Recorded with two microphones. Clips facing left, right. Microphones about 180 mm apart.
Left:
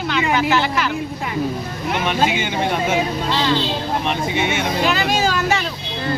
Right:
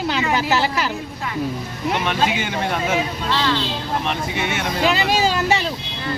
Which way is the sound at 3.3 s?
20° left (ahead or behind).